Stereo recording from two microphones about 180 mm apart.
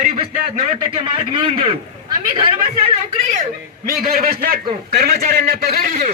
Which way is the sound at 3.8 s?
55° right (ahead or behind).